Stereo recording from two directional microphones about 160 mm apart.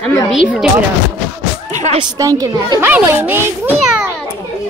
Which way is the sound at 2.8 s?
10° right (ahead or behind).